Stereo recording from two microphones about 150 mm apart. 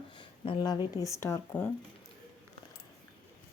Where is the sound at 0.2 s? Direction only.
30° left (ahead or behind).